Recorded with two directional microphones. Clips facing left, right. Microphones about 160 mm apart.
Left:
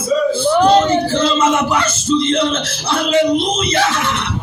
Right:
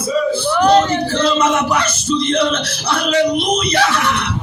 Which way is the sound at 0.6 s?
25° left (ahead or behind).